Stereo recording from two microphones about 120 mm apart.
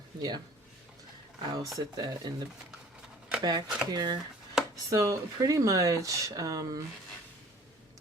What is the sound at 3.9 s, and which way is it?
Speech, 35° right (ahead or behind).